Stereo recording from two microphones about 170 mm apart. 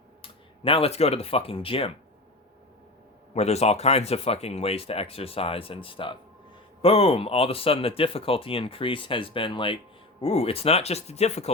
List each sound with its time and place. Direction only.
0.2 s speech: 30° left (ahead or behind)
3.3 s speech: 40° left (ahead or behind)